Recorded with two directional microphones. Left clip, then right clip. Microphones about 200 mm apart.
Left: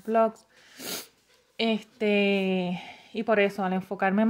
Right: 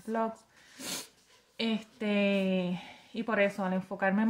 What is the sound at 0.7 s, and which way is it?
Cat, 40° left (ahead or behind).